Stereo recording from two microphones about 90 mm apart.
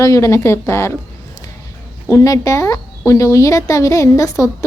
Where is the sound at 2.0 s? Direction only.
40° left (ahead or behind).